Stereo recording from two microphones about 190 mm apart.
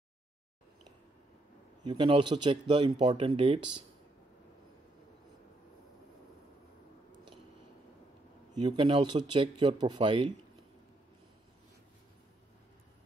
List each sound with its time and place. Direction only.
1.9 s speech: 25° right (ahead or behind)
8.5 s speech: 25° right (ahead or behind)